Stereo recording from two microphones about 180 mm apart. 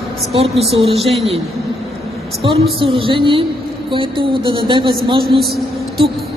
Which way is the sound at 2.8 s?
30° right (ahead or behind).